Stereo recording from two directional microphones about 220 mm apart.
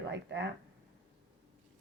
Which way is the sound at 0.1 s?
50° right (ahead or behind).